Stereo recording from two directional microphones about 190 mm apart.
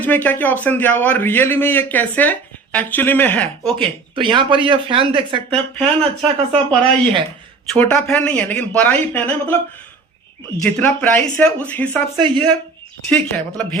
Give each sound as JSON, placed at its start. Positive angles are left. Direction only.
{"t": 0.0, "sound": "a man's voice", "side_deg": 10}
{"t": 3.8, "sound": "speech", "side_deg": -25}
{"t": 7.7, "sound": "a man's voice", "side_deg": 5}
{"t": 10.6, "sound": "a man's voice", "side_deg": 10}
{"t": 12.2, "sound": "speech", "side_deg": -25}
{"t": 13.1, "sound": "a man's voice", "side_deg": 5}